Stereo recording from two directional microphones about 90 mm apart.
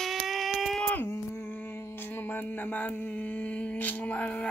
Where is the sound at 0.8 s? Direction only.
25° left (ahead or behind).